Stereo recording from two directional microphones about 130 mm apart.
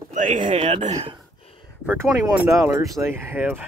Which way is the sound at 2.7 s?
20° right (ahead or behind).